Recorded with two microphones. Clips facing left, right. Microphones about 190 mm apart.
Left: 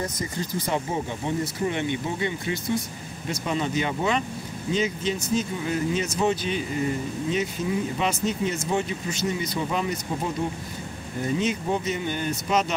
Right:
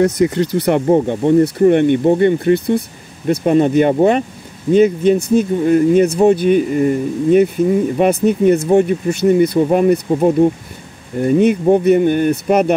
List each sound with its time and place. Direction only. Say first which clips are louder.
0.0 s speech: right 16 dB; 70° right (ahead or behind)